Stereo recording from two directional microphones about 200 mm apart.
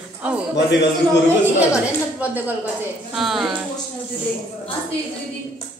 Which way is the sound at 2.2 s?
10° right (ahead or behind).